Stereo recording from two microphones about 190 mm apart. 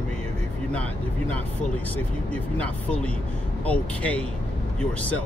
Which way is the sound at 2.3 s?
5° left (ahead or behind).